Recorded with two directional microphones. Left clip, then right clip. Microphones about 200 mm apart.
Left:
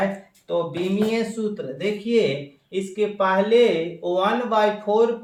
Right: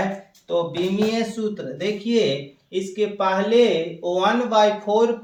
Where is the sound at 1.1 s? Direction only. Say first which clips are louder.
Even; 15° left (ahead or behind).